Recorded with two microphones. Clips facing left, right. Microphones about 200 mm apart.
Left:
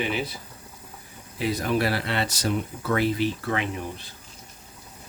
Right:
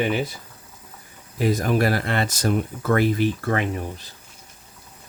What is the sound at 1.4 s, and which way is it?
Speech, 45° right (ahead or behind).